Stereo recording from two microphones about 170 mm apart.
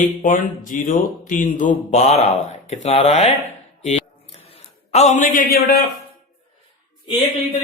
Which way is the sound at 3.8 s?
35° left (ahead or behind).